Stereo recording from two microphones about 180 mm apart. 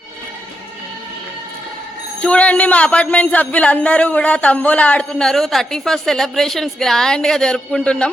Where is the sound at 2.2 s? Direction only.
5° left (ahead or behind).